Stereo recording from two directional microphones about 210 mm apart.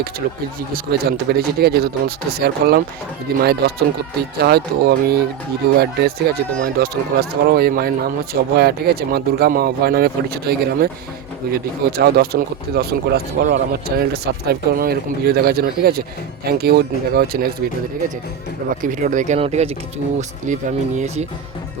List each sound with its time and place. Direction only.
0.7 s speech: 45° right (ahead or behind)
18.8 s speech: 40° right (ahead or behind)